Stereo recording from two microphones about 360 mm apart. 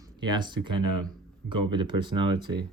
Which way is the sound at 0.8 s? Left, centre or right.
Right.